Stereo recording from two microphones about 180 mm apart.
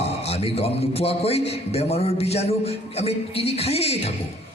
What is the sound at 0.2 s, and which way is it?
A man's voice, 35° left (ahead or behind).